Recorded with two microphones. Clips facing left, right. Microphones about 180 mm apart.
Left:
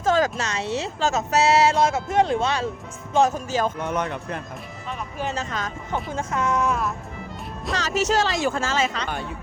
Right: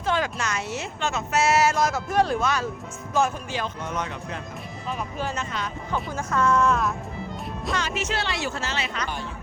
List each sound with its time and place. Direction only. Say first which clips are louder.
0.0 s speech: left 5 dB; 40° left (ahead or behind)
3.3 s speech: left 6 dB; 45° left (ahead or behind)
3.8 s speech: left 4 dB; 55° left (ahead or behind)
5.9 s speech: left 1 dB; 20° left (ahead or behind)
7.8 s speech: left 9 dB; 40° left (ahead or behind)